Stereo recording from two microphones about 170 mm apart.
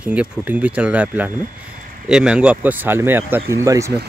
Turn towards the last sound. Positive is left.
turn(degrees=-20)  # may be behind; listen again after turning